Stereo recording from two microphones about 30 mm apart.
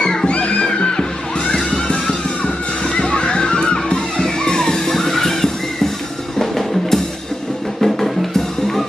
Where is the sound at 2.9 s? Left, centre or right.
Left.